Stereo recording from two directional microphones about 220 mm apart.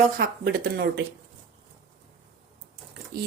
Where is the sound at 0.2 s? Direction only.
45° right (ahead or behind).